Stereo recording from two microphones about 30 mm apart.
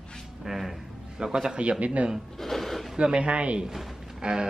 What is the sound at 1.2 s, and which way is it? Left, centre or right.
Speech, right.